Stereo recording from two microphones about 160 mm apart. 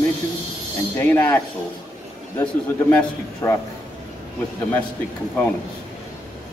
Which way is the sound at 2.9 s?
15° left (ahead or behind).